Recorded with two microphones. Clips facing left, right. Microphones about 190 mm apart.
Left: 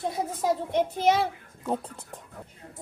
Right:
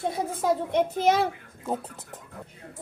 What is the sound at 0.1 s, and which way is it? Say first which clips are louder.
A child's voice: right 1 dB; 55° right (ahead or behind).